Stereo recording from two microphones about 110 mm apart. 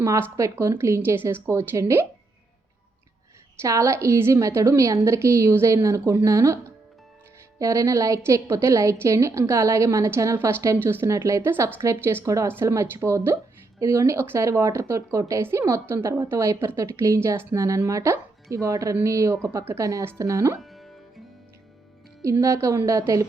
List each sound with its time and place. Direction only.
0.0 s speech: 25° right (ahead or behind)
3.6 s speech: 25° right (ahead or behind)
7.6 s speech: 30° right (ahead or behind)
20.6 s music: centre (ahead or behind)
22.2 s speech: 25° right (ahead or behind)